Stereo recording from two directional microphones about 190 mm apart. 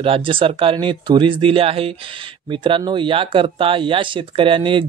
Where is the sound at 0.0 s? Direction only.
30° right (ahead or behind).